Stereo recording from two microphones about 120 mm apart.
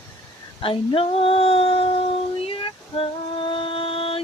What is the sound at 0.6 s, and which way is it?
Female singing, 50° left (ahead or behind).